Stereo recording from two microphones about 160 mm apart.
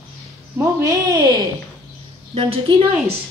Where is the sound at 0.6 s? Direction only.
20° right (ahead or behind).